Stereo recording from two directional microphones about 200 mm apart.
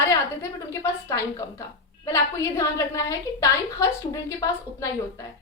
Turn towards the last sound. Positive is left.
turn(degrees=15)  # may be behind; listen again after turning